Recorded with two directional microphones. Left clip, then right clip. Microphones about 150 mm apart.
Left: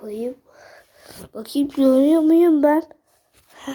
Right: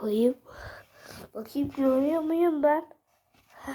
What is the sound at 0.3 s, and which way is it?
Whispering, 45° right (ahead or behind).